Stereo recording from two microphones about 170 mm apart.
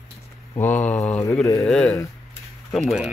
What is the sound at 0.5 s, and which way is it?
Speech, 10° left (ahead or behind).